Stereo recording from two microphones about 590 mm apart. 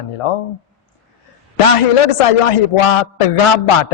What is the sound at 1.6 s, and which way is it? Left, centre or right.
A man's voice, left.